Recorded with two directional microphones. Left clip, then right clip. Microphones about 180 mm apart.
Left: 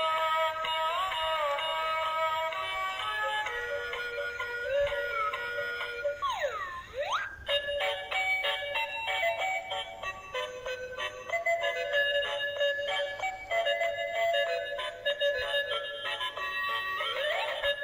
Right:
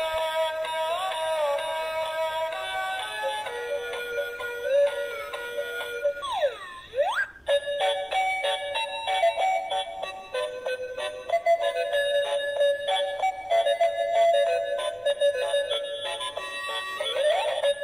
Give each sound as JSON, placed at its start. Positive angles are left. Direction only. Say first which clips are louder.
{"t": 0.0, "sound": "music", "louder": "right 2 dB", "side_deg": -25}
{"t": 4.6, "sound": "music", "louder": "right 8 dB", "side_deg": -25}
{"t": 7.0, "sound": "music", "louder": "right 7 dB", "side_deg": -35}
{"t": 11.4, "sound": "music", "louder": "right 5 dB", "side_deg": -25}
{"t": 17.0, "sound": "music", "louder": "right 12 dB", "side_deg": -30}